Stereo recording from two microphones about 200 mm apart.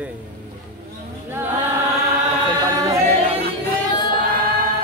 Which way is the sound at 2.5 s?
20° right (ahead or behind).